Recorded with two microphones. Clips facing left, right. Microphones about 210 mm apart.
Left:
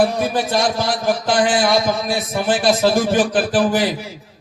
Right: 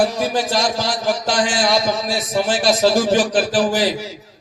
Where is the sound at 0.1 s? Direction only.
55° left (ahead or behind).